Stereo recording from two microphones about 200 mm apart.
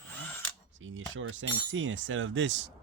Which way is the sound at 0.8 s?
75° right (ahead or behind).